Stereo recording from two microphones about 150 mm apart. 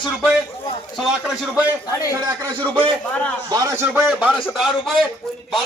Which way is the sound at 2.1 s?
20° right (ahead or behind).